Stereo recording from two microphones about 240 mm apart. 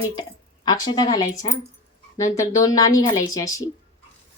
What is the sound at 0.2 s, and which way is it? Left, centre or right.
Speech, centre.